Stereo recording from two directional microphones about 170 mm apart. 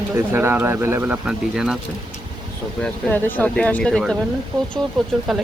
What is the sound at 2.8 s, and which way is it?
Speech, 10° left (ahead or behind).